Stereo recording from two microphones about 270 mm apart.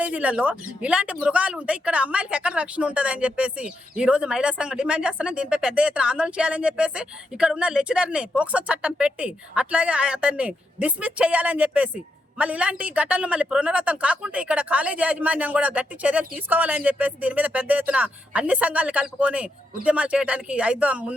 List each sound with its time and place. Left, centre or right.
0.0 s speech: centre